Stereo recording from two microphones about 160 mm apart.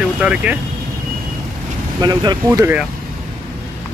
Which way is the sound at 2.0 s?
25° right (ahead or behind).